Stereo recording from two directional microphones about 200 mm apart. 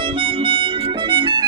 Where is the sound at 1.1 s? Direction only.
25° right (ahead or behind).